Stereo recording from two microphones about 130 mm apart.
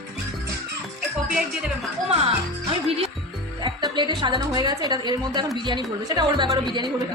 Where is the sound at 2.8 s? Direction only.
50° right (ahead or behind).